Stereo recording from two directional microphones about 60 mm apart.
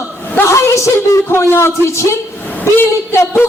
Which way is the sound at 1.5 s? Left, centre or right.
Left.